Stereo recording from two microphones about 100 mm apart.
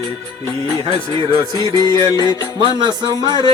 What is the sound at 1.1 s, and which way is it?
Music, 50° right (ahead or behind).